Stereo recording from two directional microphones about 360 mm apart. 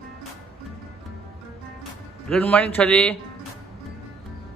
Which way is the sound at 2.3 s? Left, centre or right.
Centre.